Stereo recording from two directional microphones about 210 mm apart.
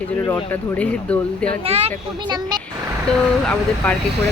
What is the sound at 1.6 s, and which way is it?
Speech, 30° right (ahead or behind).